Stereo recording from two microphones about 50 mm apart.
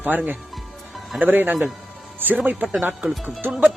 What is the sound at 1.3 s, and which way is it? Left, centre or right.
Speech, right.